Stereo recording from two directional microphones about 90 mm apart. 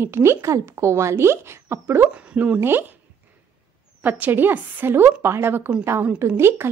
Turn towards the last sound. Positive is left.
turn(degrees=-25)  # may be behind; listen again after turning